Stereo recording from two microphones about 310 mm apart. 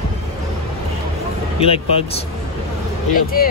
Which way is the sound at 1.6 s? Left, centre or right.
Centre.